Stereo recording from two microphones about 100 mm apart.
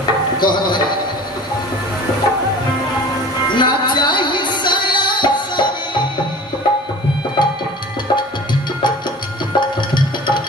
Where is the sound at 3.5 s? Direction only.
50° left (ahead or behind).